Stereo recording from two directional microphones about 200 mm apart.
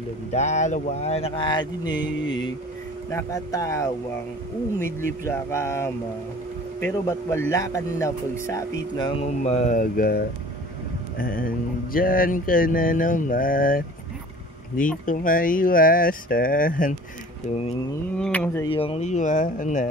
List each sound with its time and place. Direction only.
0.3 s speech: 35° left (ahead or behind)
3.1 s speech: 15° left (ahead or behind)
5.2 s speech: 15° left (ahead or behind)
9.2 s speech: 35° left (ahead or behind)
11.1 s a sound: 45° left (ahead or behind)
15.0 s a sound: 45° left (ahead or behind)
18.1 s speech: 5° left (ahead or behind)
18.7 s speech: 30° left (ahead or behind)